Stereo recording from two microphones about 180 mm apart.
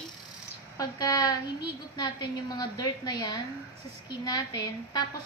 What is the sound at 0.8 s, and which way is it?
A woman's voice, 20° left (ahead or behind).